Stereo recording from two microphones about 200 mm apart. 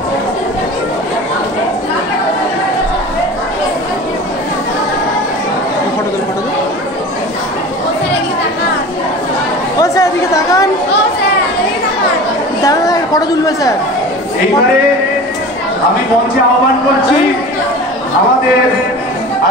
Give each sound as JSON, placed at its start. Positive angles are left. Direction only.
{"t": 9.8, "sound": "chatter", "side_deg": 15}
{"t": 12.6, "sound": "chatter", "side_deg": 20}